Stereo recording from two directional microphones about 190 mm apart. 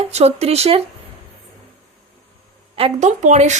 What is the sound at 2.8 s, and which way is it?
Speech, 35° right (ahead or behind).